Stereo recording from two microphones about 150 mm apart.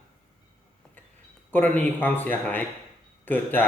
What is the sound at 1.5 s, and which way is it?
A man's voice, 10° left (ahead or behind).